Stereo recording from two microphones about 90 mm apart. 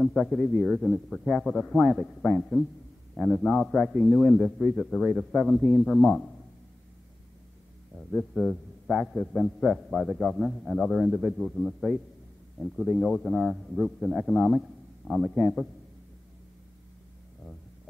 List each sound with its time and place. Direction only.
0.0 s a man's voice: centre (ahead or behind)
8.0 s a man's voice: 5° left (ahead or behind)